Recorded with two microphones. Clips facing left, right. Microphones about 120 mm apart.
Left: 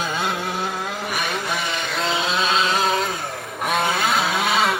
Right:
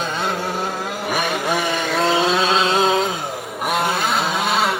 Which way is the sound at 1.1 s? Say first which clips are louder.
Right 7 dB; 45° right (ahead or behind).